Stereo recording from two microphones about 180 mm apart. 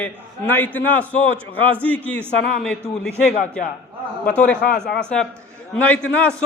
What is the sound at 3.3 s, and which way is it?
Speech, 45° left (ahead or behind).